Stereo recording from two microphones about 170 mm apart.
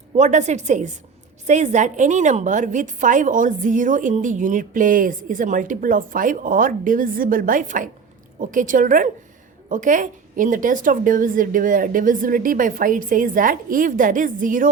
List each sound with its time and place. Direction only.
0.2 s a woman's voice: 45° right (ahead or behind)